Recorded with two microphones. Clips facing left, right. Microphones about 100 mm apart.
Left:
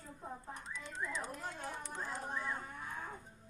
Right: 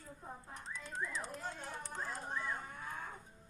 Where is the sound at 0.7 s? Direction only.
45° right (ahead or behind).